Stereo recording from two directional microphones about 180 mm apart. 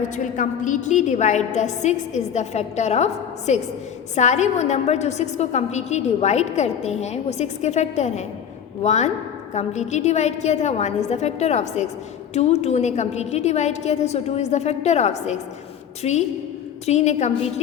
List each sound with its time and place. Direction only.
0.2 s a woman's voice: 45° left (ahead or behind)